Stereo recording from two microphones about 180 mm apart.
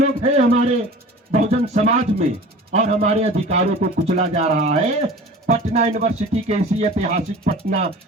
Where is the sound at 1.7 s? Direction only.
35° right (ahead or behind).